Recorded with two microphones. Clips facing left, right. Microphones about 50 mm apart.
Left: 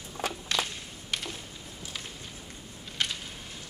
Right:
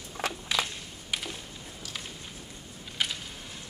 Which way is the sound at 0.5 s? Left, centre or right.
Centre.